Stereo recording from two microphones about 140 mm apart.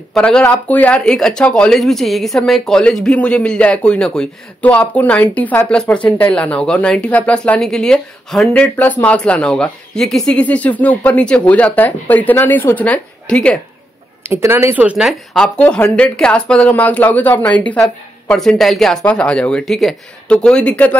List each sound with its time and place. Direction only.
0.1 s speech: 5° left (ahead or behind)
14.2 s speech: 20° right (ahead or behind)
15.3 s speech: 5° left (ahead or behind)